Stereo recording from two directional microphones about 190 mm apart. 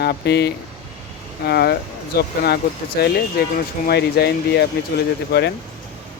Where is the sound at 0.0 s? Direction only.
60° left (ahead or behind).